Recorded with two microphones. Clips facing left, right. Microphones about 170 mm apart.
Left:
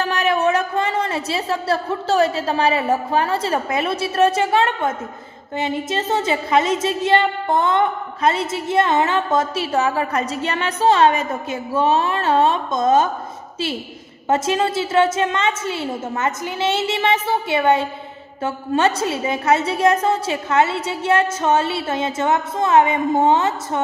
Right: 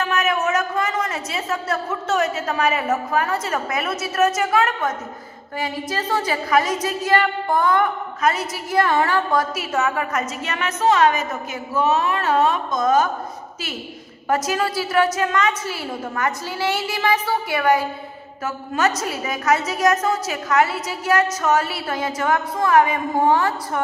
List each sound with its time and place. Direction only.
0.0 s a woman's voice: 35° left (ahead or behind)
14.3 s a woman's voice: 25° left (ahead or behind)